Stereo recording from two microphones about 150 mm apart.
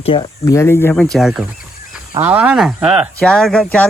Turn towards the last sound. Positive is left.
turn(degrees=5)  # may be behind; listen again after turning